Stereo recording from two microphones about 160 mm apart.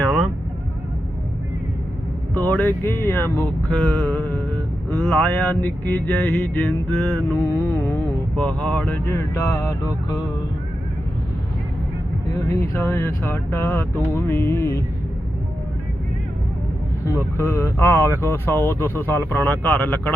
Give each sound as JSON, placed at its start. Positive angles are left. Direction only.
{"t": 2.3, "sound": "speech", "side_deg": 10}
{"t": 12.5, "sound": "speech", "side_deg": 15}
{"t": 17.1, "sound": "speech", "side_deg": 15}